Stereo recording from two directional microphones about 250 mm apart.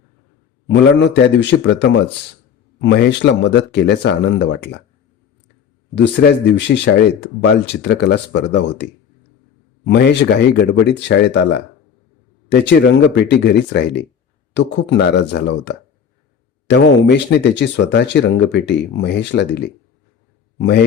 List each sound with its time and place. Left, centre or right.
0.7 s speech: left
5.9 s speech: left
12.5 s a man's voice: left